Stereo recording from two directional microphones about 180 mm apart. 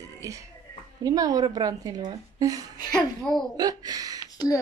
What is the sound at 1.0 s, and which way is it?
Speech, 20° right (ahead or behind).